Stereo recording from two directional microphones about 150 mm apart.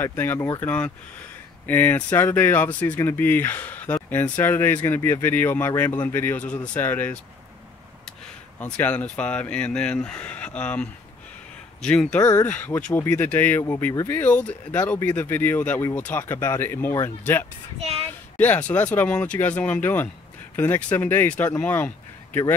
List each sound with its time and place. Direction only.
0.0 s speech: 15° left (ahead or behind)
8.5 s speech: 10° left (ahead or behind)
12.2 s speech: 25° left (ahead or behind)
12.4 s speech: 10° left (ahead or behind)